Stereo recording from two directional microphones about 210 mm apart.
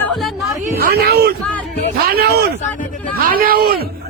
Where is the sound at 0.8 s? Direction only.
45° right (ahead or behind).